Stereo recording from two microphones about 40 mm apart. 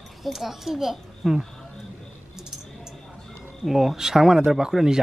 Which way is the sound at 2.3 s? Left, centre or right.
Centre.